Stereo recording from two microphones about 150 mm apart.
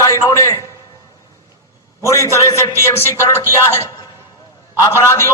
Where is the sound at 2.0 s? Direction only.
20° left (ahead or behind).